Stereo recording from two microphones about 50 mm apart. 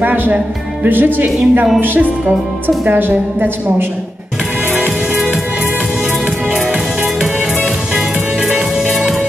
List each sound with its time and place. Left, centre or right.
0.0 s a woman's voice: right
7.9 s music: centre